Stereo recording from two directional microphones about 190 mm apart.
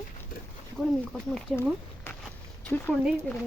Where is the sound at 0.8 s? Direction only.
Centre (ahead or behind).